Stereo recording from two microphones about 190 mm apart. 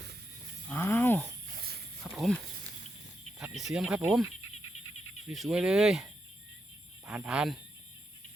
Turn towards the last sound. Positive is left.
turn(degrees=-5)  # may be behind; listen again after turning